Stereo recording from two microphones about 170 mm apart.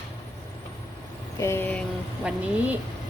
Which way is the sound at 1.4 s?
15° left (ahead or behind).